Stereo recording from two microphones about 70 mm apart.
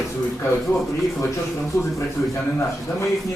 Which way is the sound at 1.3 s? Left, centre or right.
Left.